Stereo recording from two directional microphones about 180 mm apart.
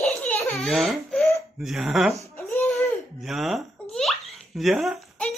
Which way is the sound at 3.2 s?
Centre (ahead or behind).